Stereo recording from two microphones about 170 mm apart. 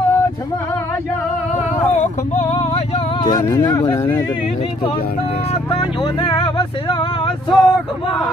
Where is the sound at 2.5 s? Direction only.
40° left (ahead or behind).